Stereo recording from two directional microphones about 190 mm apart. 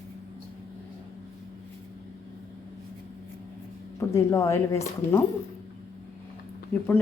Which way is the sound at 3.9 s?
15° left (ahead or behind).